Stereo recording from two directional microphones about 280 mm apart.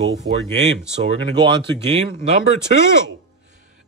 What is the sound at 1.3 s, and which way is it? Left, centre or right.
Speech, centre.